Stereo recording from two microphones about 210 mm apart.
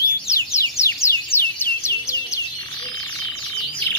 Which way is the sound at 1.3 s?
10° left (ahead or behind).